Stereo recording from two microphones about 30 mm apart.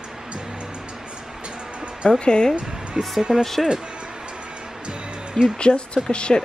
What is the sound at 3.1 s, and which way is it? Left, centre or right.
Speech, right.